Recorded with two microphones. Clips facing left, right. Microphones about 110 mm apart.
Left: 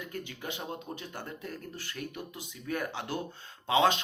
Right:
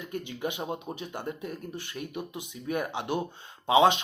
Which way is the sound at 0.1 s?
20° right (ahead or behind).